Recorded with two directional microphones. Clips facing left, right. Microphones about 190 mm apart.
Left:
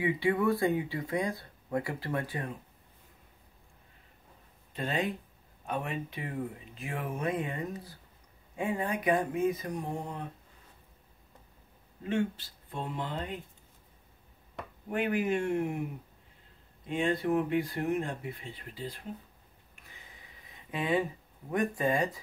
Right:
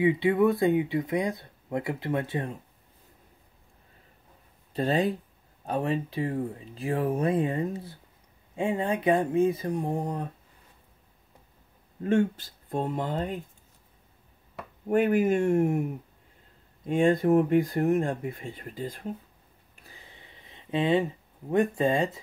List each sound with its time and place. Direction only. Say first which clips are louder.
0.0 s speech: right 6 dB; 20° right (ahead or behind)
4.7 s speech: right 7 dB; 35° right (ahead or behind)
12.0 s speech: right 7 dB; 50° right (ahead or behind)
14.9 s speech: right 7 dB; 45° right (ahead or behind)
16.8 s speech: right 7 dB; 45° right (ahead or behind)
19.9 s a sound: right 4 dB; 30° right (ahead or behind)
21.5 s speech: right 5 dB; 25° right (ahead or behind)